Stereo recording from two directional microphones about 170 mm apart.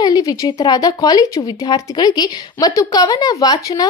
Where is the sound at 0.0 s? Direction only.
20° left (ahead or behind).